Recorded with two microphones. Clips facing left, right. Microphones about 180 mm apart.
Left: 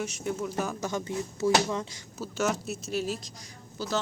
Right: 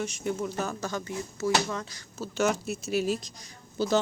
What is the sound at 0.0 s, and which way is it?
Speech, 5° left (ahead or behind).